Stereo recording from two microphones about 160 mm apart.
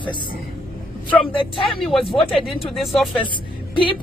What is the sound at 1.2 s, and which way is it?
Speech, 35° left (ahead or behind).